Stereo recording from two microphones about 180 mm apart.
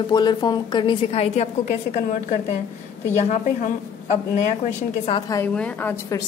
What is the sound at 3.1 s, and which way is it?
A woman's voice, 40° left (ahead or behind).